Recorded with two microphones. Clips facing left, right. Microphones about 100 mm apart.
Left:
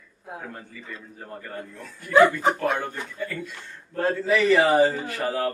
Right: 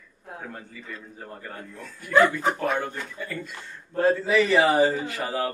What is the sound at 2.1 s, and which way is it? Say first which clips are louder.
Speech: left 3 dB; 15° left (ahead or behind).